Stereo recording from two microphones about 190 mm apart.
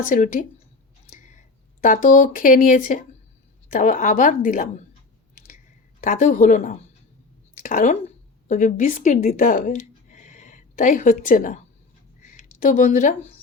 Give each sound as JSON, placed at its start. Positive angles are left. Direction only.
{"t": 0.0, "sound": "speech", "side_deg": 45}
{"t": 1.8, "sound": "speech", "side_deg": 40}
{"t": 6.0, "sound": "speech", "side_deg": 40}